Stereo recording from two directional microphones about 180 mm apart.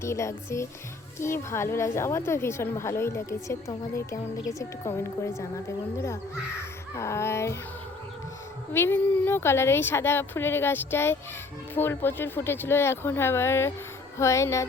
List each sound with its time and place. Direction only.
0.0 s a woman's voice: 15° left (ahead or behind)
6.6 s speech: 15° left (ahead or behind)
8.7 s a woman's voice: 10° left (ahead or behind)